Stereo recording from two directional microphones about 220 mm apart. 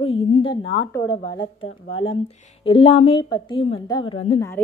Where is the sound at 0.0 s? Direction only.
25° left (ahead or behind).